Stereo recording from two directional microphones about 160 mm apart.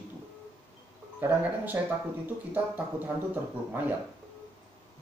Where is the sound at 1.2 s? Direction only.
10° right (ahead or behind).